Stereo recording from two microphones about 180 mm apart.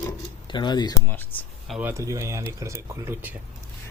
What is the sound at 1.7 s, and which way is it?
Speech, 15° right (ahead or behind).